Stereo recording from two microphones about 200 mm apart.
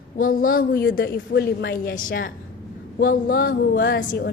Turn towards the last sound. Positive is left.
turn(degrees=50)  # may be behind; listen again after turning